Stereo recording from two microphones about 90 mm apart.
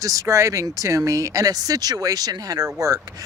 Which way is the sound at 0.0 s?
40° right (ahead or behind).